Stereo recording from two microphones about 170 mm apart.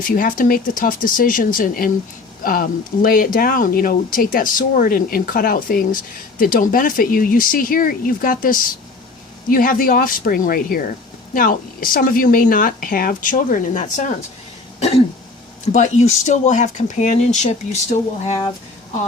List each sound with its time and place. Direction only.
0.2 s speech: 55° left (ahead or behind)
15.7 s speech: 45° left (ahead or behind)